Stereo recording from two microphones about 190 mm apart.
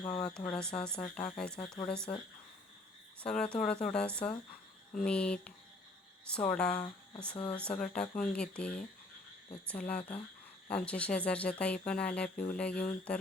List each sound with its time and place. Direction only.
0.2 s speech: 5° left (ahead or behind)
1.5 s speech: 25° left (ahead or behind)
1.9 s speech: 5° left (ahead or behind)
3.2 s speech: 5° left (ahead or behind)